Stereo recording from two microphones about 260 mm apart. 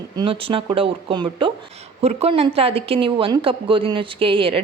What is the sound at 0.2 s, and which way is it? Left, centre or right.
Speech, centre.